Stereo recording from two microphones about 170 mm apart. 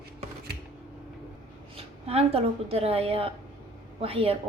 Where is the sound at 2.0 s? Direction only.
35° right (ahead or behind).